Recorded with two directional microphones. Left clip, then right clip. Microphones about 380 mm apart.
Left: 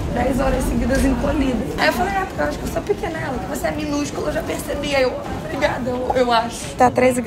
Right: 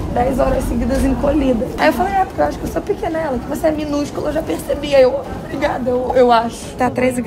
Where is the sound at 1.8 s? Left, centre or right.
Centre.